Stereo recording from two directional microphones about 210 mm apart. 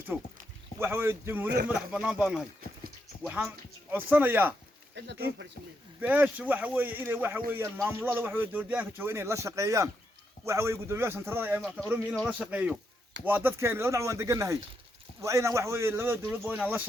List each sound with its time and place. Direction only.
0.1 s speech: 5° right (ahead or behind)
5.0 s speech: 55° right (ahead or behind)
6.0 s speech: 5° right (ahead or behind)